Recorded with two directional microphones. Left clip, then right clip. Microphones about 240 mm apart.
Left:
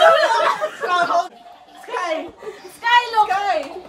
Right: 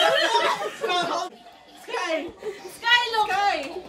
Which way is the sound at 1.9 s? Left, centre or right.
Centre.